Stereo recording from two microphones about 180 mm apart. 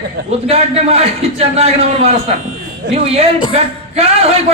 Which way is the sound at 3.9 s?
35° right (ahead or behind).